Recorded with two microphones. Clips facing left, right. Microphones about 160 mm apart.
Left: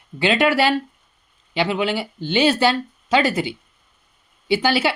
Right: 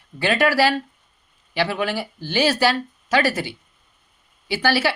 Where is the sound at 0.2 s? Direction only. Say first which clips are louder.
Left 1 dB; 20° left (ahead or behind).